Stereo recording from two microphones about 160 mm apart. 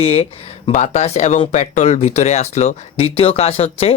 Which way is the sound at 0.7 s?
45° left (ahead or behind).